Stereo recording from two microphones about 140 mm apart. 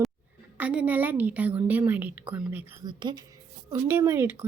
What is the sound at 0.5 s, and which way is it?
A woman's voice, 10° right (ahead or behind).